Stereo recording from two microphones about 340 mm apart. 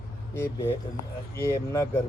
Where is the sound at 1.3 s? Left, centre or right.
Centre.